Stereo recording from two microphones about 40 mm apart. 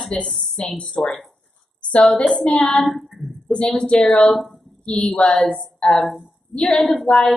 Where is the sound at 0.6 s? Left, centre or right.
Centre.